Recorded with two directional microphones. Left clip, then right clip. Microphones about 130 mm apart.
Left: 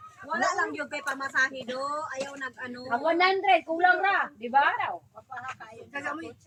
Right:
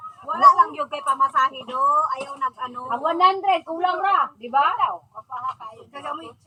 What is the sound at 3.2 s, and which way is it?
Speech, 25° left (ahead or behind).